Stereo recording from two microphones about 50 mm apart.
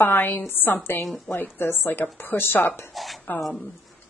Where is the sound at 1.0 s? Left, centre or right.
Centre.